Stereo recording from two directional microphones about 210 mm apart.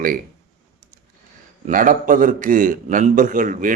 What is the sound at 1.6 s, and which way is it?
A man's voice, 40° right (ahead or behind).